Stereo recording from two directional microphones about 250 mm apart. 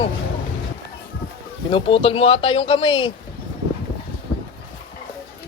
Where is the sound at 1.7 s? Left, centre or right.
Left.